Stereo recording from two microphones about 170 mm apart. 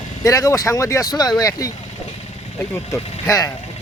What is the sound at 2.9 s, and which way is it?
Speech, 15° left (ahead or behind).